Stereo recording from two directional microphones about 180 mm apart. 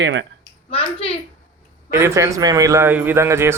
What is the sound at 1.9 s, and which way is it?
Speech, 15° right (ahead or behind).